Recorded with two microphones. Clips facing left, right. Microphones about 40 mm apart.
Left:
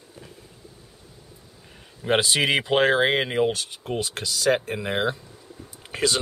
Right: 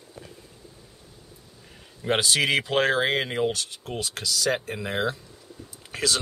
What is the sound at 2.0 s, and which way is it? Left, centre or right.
Speech, centre.